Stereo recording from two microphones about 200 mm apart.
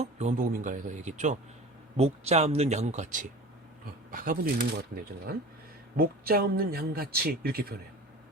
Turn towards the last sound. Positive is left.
turn(degrees=-50)  # may be behind; listen again after turning